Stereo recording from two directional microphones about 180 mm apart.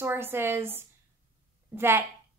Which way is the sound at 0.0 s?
15° right (ahead or behind).